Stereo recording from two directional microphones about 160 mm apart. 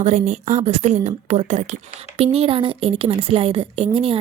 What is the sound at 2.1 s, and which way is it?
A woman's voice, 35° right (ahead or behind).